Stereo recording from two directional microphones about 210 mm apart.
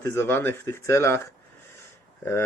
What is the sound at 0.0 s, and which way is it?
Speech, 10° left (ahead or behind).